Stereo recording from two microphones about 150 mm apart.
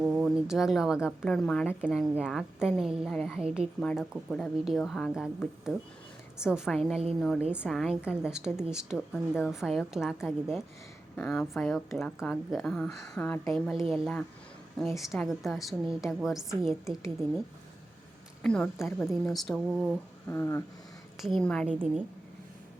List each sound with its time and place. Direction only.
0.0 s a sound: 10° right (ahead or behind)
0.3 s a woman's voice: 5° right (ahead or behind)
3.8 s a woman's voice: 5° left (ahead or behind)
18.4 s a woman's voice: 5° left (ahead or behind)
19.6 s speech: 10° right (ahead or behind)
20.2 s a sound: 20° left (ahead or behind)
21.2 s a woman's voice: centre (ahead or behind)
21.7 s speech: 5° right (ahead or behind)